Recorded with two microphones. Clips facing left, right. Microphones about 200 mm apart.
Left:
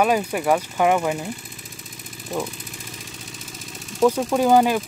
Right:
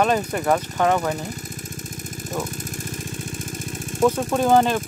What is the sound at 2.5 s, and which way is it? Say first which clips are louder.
Vehicle: right 6 dB; 45° right (ahead or behind).